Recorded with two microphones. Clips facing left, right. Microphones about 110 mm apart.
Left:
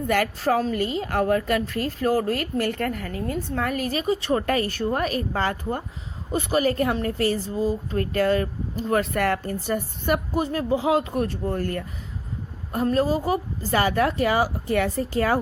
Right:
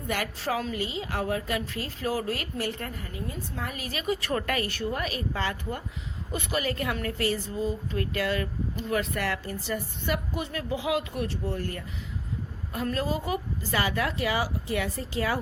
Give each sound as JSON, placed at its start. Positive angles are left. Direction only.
{"t": 0.1, "sound": "a woman's voice", "side_deg": 50}
{"t": 12.7, "sound": "a woman's voice", "side_deg": 35}